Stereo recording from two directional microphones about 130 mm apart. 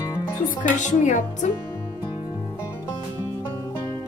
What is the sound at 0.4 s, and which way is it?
A woman's voice, 70° left (ahead or behind).